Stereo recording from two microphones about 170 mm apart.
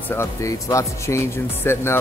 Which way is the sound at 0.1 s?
15° left (ahead or behind).